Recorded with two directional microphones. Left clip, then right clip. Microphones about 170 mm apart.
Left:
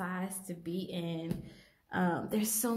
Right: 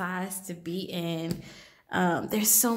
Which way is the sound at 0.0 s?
20° right (ahead or behind).